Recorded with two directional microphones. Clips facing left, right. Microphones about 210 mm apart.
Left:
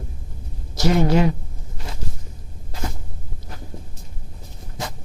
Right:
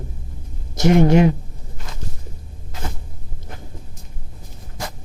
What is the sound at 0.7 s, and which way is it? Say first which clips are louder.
Speech: right 4 dB; 20° right (ahead or behind).